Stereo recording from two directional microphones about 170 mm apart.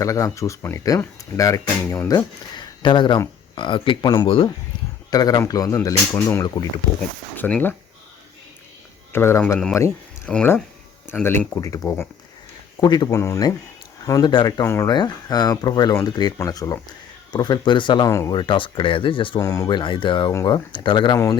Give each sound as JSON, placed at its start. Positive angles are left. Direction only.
{"t": 0.0, "sound": "speech", "side_deg": 20}
{"t": 9.1, "sound": "speech", "side_deg": 15}